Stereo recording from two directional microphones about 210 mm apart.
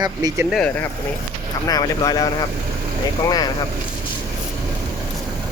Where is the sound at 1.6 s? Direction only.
15° left (ahead or behind).